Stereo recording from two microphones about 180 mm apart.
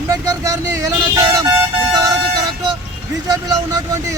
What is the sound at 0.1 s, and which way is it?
Speech, 20° right (ahead or behind).